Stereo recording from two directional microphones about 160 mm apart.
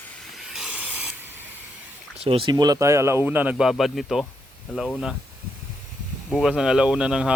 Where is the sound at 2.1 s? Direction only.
35° right (ahead or behind); by 5.1 s centre (ahead or behind).